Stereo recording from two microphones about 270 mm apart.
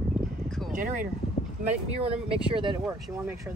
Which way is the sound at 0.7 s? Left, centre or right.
Right.